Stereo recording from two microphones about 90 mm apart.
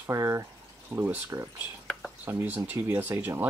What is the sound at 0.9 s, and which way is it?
Speech, 25° right (ahead or behind).